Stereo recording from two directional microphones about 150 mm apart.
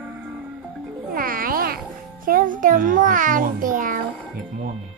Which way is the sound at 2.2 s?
65° right (ahead or behind).